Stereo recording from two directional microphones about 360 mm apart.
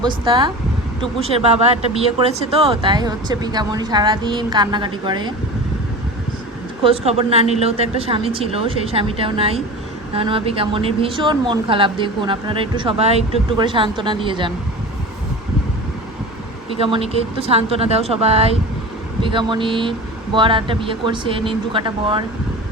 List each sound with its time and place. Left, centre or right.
0.0 s speech: centre
2.5 s speech: centre
6.8 s speech: centre
16.8 s speech: centre